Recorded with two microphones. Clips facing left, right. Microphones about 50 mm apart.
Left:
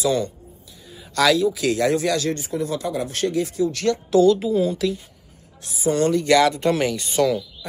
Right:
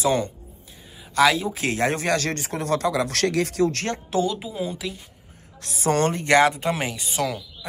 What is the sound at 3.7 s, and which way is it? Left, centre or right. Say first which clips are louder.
Speech: left 6 dB; right.